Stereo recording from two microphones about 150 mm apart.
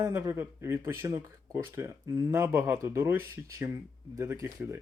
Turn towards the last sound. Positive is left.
turn(degrees=-15)  # may be behind; listen again after turning